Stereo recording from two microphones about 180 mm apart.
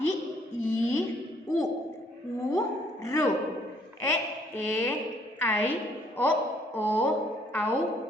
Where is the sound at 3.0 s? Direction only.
15° left (ahead or behind).